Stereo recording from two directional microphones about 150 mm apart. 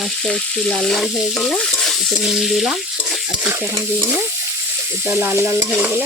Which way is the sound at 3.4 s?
15° right (ahead or behind).